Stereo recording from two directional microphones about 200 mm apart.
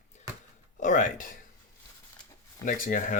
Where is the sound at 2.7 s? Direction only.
40° left (ahead or behind).